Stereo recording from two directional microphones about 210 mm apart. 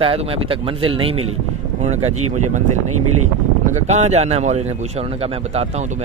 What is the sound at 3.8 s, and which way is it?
A man's voice, 30° right (ahead or behind).